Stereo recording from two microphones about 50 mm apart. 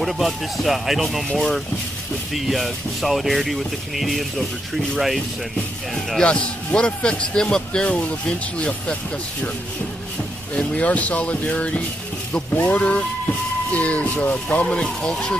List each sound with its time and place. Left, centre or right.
0.0 s speech: centre
6.2 s a man's voice: left
10.5 s a man's voice: left
14.8 s speech: centre